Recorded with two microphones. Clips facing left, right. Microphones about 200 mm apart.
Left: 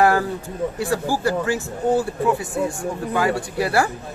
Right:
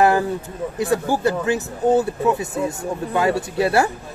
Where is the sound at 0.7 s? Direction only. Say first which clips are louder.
Right 5 dB; 20° right (ahead or behind).